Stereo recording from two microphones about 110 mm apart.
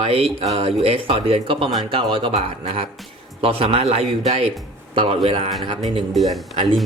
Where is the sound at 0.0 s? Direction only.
60° right (ahead or behind).